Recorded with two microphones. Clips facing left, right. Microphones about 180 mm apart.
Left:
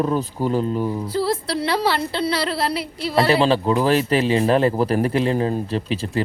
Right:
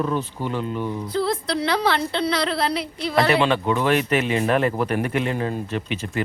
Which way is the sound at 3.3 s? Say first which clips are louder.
Left 2 dB; 35° left (ahead or behind).